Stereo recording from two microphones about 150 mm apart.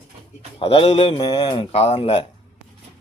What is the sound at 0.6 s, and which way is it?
Speech, 40° left (ahead or behind).